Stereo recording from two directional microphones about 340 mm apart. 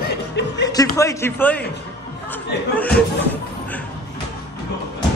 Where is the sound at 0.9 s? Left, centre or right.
Centre.